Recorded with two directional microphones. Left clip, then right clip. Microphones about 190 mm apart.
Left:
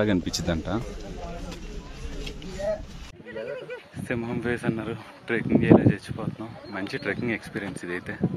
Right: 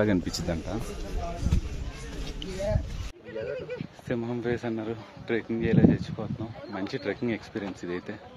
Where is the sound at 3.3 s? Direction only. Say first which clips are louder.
Even; 45° right (ahead or behind).